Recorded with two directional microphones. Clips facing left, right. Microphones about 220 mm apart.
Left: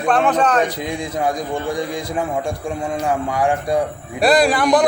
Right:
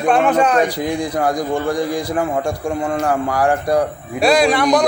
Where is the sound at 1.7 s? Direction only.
Centre (ahead or behind).